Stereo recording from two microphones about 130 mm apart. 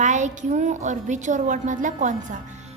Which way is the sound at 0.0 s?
70° right (ahead or behind).